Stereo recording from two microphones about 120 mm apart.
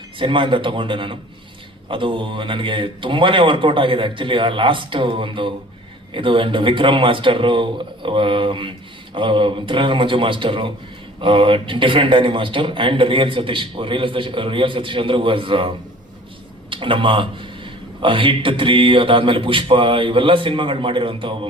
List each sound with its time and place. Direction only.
0.2 s a man's voice: 45° right (ahead or behind)